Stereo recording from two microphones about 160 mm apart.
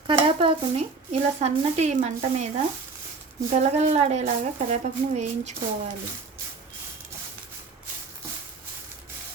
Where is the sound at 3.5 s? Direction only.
45° right (ahead or behind).